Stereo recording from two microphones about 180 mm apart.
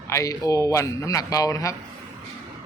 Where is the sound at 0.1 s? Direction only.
15° left (ahead or behind).